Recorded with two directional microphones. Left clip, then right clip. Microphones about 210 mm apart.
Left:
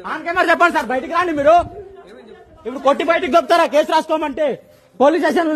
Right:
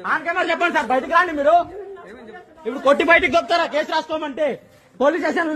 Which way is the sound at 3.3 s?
40° left (ahead or behind).